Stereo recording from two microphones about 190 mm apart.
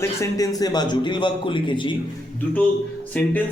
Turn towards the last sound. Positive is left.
turn(degrees=10)  # may be behind; listen again after turning